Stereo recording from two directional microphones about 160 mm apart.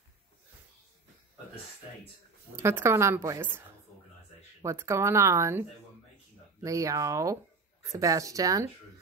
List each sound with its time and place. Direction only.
2.5 s a woman's voice: 15° right (ahead or behind)